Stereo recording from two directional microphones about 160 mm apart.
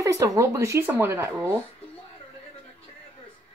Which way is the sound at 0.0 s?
20° right (ahead or behind).